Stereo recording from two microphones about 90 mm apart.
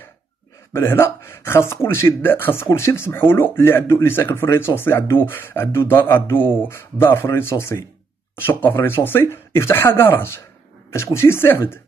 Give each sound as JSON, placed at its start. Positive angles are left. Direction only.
{"t": 0.7, "sound": "speech", "side_deg": 25}